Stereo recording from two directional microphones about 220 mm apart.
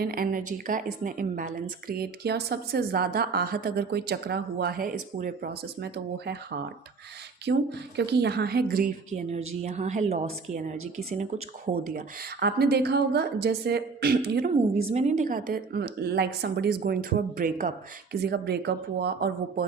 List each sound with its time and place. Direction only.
0.0 s a woman's voice: 40° right (ahead or behind)
7.5 s a woman's voice: 50° right (ahead or behind)
9.5 s a woman's voice: 30° right (ahead or behind)
11.9 s a woman's voice: 45° right (ahead or behind)
14.8 s a woman's voice: 30° right (ahead or behind); by 19.6 s 45° right (ahead or behind)